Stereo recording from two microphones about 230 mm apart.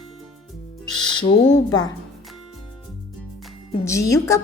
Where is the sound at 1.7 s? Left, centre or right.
Centre.